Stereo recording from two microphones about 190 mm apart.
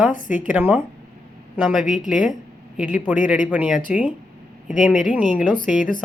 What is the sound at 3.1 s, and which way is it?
A woman's voice, 10° right (ahead or behind).